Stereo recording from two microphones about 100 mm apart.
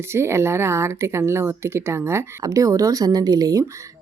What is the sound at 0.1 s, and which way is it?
Speech, 25° right (ahead or behind).